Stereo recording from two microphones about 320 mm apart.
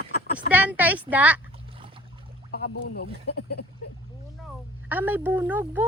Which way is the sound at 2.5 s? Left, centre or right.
Left.